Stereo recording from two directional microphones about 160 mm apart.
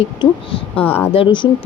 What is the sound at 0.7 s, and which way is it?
Speech, 10° left (ahead or behind).